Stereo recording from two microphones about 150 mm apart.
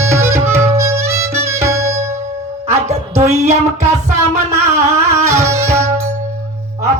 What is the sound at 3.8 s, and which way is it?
Music, 20° right (ahead or behind).